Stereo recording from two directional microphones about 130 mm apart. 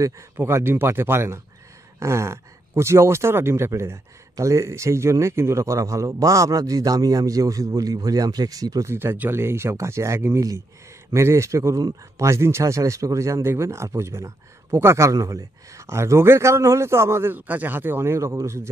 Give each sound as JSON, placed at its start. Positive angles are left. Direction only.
{"t": 0.0, "sound": "speech", "side_deg": -20}